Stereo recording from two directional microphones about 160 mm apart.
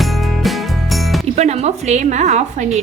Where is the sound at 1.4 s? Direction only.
45° right (ahead or behind).